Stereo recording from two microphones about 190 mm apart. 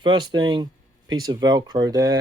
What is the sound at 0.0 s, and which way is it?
Speech, 25° right (ahead or behind).